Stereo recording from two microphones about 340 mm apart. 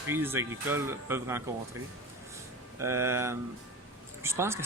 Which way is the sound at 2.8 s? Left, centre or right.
Centre.